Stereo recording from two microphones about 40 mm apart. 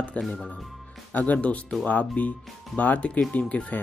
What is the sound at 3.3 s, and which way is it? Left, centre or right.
Speech, left.